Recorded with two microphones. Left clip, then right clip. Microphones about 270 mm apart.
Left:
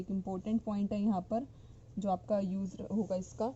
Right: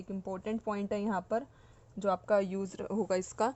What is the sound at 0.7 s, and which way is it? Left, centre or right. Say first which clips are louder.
Speech: right 4 dB; right.